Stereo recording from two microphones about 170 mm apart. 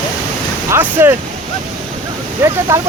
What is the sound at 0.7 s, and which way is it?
Speech, 15° right (ahead or behind).